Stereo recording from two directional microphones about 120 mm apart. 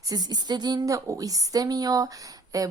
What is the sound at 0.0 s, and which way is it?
A woman's voice, 35° right (ahead or behind).